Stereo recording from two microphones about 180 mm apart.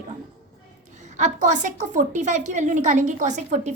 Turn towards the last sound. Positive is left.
turn(degrees=-40)  # may be behind; listen again after turning